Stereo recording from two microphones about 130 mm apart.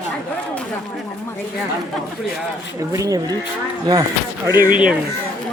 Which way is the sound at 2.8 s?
25° right (ahead or behind).